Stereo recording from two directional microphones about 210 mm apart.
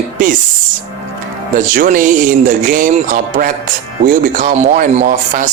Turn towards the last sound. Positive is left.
turn(degrees=-40)  # may be behind; listen again after turning